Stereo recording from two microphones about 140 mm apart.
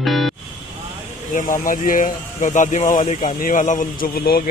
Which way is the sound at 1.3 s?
70° left (ahead or behind).